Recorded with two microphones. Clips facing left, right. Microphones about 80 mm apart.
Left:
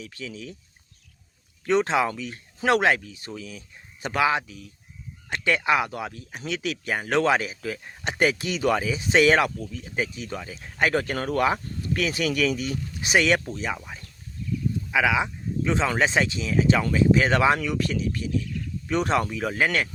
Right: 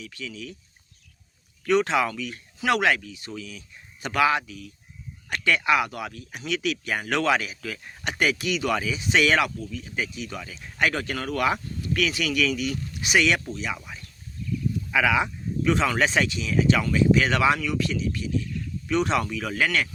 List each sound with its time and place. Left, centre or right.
0.0 s speech: left
1.6 s speech: left
4.0 s speech: left
14.8 s speech: centre; by 19.9 s left